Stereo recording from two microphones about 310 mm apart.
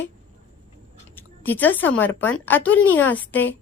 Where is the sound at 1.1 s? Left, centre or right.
Centre.